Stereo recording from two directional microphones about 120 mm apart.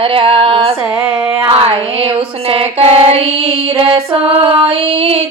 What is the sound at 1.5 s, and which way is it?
Music, 50° right (ahead or behind).